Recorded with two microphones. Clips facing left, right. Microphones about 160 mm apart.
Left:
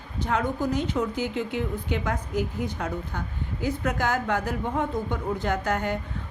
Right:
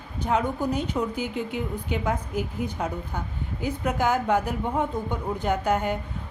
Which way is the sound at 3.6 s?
10° right (ahead or behind).